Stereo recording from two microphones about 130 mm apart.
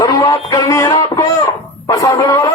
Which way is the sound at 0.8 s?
30° left (ahead or behind).